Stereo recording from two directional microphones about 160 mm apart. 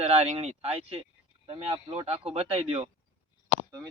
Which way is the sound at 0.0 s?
40° right (ahead or behind).